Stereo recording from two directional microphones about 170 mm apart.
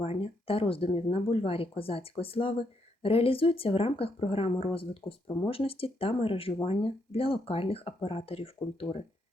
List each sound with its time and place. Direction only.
0.0 s speech: 35° left (ahead or behind)